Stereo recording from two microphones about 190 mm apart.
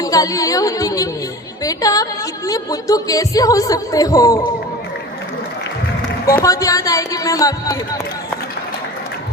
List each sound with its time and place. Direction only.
0.0 s speech: 20° left (ahead or behind)
6.3 s speech: 15° left (ahead or behind)